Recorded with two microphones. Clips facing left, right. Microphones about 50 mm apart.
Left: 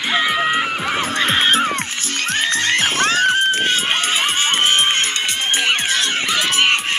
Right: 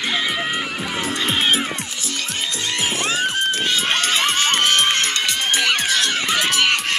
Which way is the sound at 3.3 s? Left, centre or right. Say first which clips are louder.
Left 4 dB; left.